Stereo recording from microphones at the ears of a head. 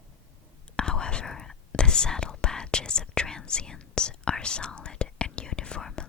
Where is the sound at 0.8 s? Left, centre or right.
Left.